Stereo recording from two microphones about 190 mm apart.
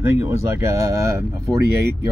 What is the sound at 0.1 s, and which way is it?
Speech, 15° right (ahead or behind).